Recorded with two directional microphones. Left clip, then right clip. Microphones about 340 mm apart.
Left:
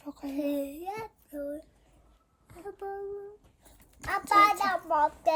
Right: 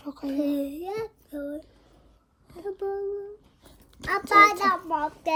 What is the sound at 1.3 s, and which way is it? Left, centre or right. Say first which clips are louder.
Child singing: even; centre.